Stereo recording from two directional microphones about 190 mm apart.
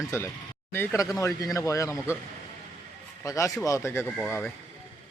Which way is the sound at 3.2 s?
15° left (ahead or behind).